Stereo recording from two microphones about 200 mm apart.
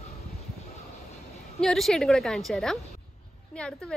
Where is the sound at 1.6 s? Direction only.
Centre (ahead or behind).